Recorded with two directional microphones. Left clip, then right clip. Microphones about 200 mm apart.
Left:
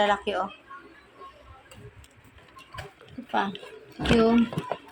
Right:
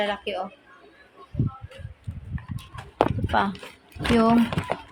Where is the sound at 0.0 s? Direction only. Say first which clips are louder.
Left 3 dB; centre (ahead or behind).